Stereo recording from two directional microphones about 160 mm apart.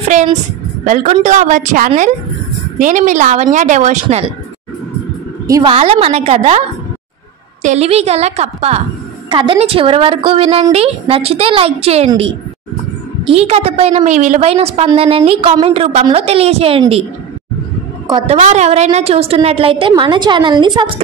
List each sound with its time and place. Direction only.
0.8 s a woman's voice: 55° right (ahead or behind)
5.7 s a woman's voice: 35° right (ahead or behind)
7.6 s a woman's voice: 45° right (ahead or behind)
9.3 s a woman's voice: 30° right (ahead or behind)
13.3 s a woman's voice: 40° right (ahead or behind)
18.2 s a woman's voice: 40° right (ahead or behind)